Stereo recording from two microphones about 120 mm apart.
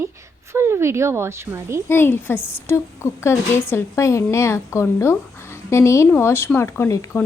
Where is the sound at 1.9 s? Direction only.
20° left (ahead or behind).